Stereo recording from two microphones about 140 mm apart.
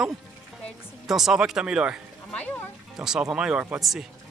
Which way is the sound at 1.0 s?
5° right (ahead or behind).